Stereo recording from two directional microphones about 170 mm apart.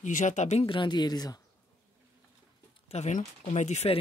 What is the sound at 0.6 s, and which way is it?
Speech, 30° left (ahead or behind).